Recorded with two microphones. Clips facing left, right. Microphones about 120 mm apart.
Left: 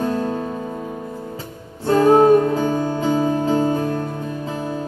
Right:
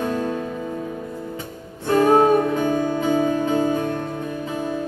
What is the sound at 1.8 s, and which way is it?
Music, 35° left (ahead or behind).